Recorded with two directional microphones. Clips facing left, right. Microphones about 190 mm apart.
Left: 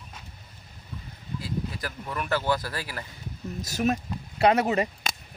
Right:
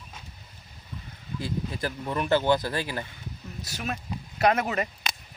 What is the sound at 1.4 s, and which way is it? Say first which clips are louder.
Speech: right 2 dB; 25° right (ahead or behind).